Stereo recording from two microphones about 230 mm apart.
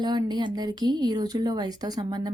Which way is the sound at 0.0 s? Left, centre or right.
Centre.